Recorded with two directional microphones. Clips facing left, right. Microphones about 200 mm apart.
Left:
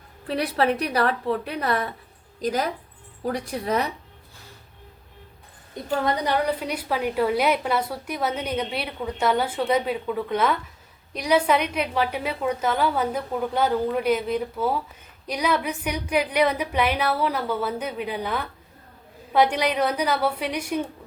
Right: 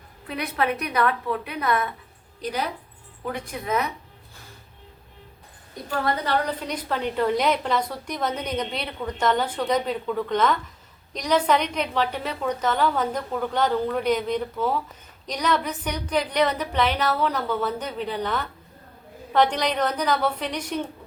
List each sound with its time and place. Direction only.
0.3 s a woman's voice: 35° left (ahead or behind)
5.7 s a woman's voice: 20° left (ahead or behind)